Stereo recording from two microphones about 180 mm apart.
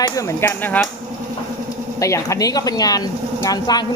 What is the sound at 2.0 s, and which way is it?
A woman's voice, 15° left (ahead or behind).